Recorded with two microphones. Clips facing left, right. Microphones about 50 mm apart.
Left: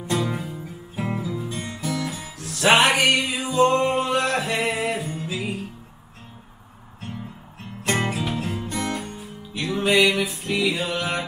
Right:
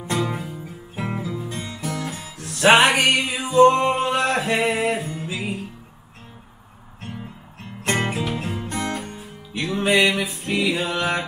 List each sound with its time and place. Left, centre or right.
0.2 s music: centre
1.5 s music: right
7.8 s music: right
8.4 s music: centre
8.6 s music: right